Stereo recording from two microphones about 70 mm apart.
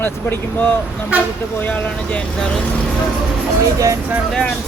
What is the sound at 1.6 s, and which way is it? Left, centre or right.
Speech, left.